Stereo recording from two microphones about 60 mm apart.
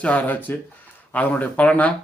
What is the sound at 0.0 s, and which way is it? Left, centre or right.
Speech, left.